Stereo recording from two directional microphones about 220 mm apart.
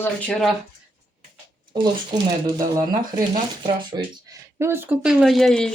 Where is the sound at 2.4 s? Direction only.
15° right (ahead or behind).